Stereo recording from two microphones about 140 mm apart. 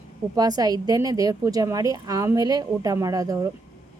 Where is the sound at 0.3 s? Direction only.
25° right (ahead or behind).